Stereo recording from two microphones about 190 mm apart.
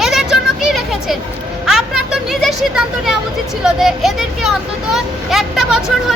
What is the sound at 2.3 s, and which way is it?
Speech, centre (ahead or behind).